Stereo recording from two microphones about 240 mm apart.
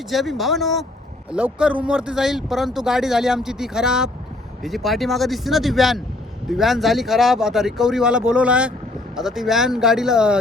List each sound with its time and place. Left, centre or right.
0.1 s speech: centre